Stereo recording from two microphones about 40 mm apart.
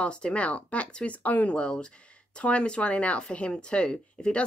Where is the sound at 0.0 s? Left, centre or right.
Left.